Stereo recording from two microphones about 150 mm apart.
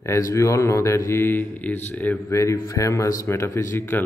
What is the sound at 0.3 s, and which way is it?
Speech, 20° left (ahead or behind).